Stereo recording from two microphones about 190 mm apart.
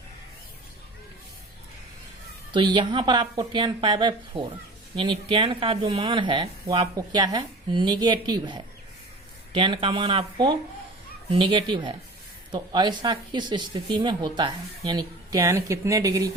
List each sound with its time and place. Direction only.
2.5 s speech: 25° right (ahead or behind)